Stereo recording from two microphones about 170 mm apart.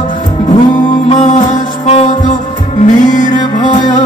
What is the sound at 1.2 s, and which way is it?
Music, 40° left (ahead or behind).